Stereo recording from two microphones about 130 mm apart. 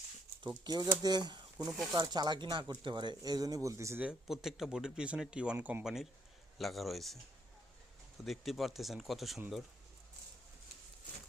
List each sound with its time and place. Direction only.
0.4 s speech: 35° right (ahead or behind)
4.0 s speech: 5° right (ahead or behind)
8.2 s speech: centre (ahead or behind)